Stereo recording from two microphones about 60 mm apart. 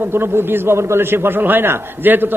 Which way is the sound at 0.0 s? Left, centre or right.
Right.